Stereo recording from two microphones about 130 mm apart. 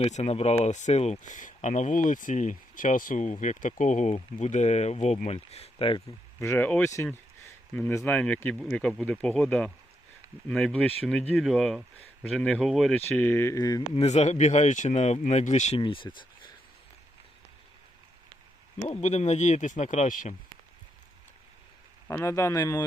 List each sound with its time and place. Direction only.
0.0 s speech: 55° left (ahead or behind); by 3.3 s 80° left
3.4 s speech: 70° left (ahead or behind); by 6.0 s 45° left (ahead or behind)
6.4 s speech: 20° left (ahead or behind); by 13.0 s centre (ahead or behind)
13.1 s speech: 15° left (ahead or behind)
13.9 s speech: 55° left (ahead or behind)
15.8 s speech: 40° left (ahead or behind)
18.9 s speech: 60° left (ahead or behind); by 20.3 s 75° left (ahead or behind)
22.0 s speech: 20° left (ahead or behind)